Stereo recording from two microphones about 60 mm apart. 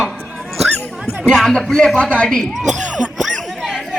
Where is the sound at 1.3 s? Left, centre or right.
Centre.